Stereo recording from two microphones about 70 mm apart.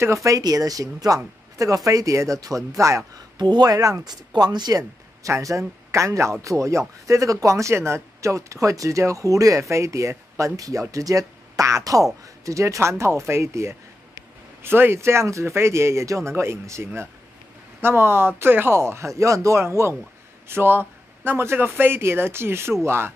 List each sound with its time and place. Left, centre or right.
0.0 s speech: right
0.4 s speech: right
3.3 s speech: right
5.2 s speech: right